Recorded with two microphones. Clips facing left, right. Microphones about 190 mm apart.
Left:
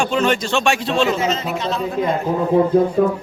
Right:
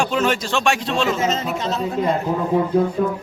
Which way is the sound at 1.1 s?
45° right (ahead or behind).